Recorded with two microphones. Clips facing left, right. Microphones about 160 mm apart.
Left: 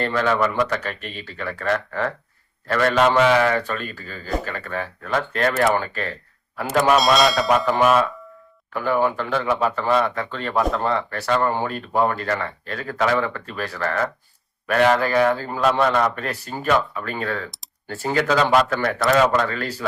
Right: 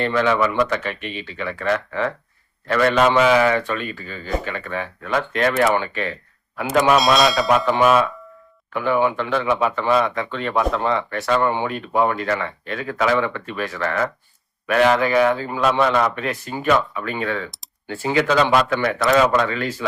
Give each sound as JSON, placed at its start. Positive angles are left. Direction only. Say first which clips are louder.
{"t": 0.0, "sound": "speech", "louder": "right 2 dB", "side_deg": 40}
{"t": 6.9, "sound": "speech", "louder": "left 1 dB", "side_deg": 0}
{"t": 8.7, "sound": "a man's voice", "louder": "right 1 dB", "side_deg": 40}